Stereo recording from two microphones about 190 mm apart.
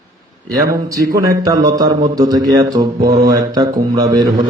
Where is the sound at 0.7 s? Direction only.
15° right (ahead or behind).